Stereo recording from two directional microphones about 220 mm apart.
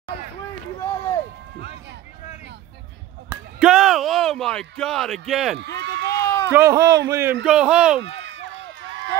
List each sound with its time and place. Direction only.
3.3 s a sound: 5° right (ahead or behind)
5.8 s run: 50° right (ahead or behind)
6.0 s run: 15° left (ahead or behind)
6.5 s speech: 15° right (ahead or behind)